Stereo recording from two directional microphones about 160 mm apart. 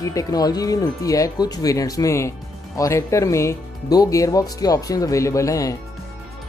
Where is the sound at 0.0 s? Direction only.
20° left (ahead or behind).